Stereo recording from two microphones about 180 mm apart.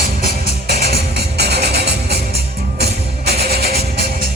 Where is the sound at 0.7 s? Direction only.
60° right (ahead or behind).